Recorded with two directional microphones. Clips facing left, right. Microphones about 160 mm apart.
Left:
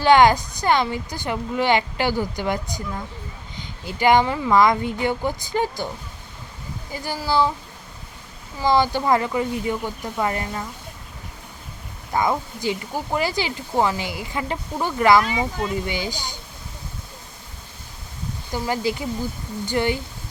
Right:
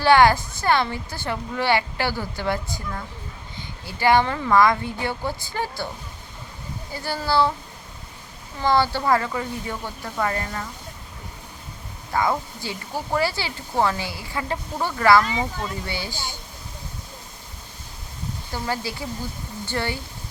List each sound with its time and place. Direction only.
0.0 s a woman's voice: 20° left (ahead or behind)
6.9 s a woman's voice: 15° left (ahead or behind)
8.6 s a woman's voice: 15° left (ahead or behind)
12.1 s a woman's voice: 20° left (ahead or behind)
18.5 s a woman's voice: 15° left (ahead or behind)